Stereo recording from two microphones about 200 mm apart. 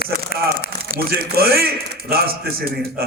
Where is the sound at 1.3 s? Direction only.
50° right (ahead or behind).